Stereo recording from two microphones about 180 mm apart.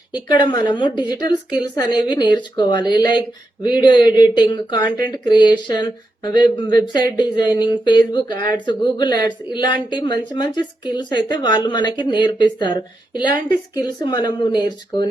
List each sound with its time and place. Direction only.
0.3 s speech: 25° left (ahead or behind)